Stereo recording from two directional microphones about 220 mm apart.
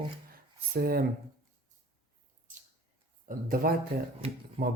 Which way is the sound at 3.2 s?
40° right (ahead or behind).